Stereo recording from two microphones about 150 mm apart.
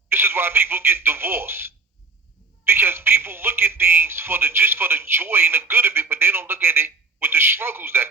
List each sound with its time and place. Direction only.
0.1 s speech: 15° right (ahead or behind)